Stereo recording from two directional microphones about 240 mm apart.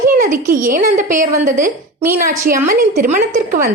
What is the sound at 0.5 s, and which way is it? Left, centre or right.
A woman's voice, right.